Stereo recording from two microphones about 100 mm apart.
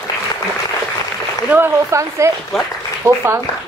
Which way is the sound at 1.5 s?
25° right (ahead or behind).